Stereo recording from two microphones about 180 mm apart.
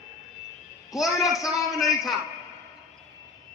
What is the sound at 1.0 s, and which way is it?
Speech, centre (ahead or behind).